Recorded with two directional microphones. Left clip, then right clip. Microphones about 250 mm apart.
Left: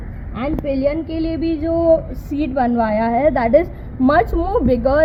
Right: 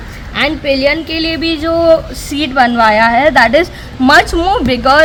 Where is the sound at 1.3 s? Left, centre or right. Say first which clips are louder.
Right 5 dB; right.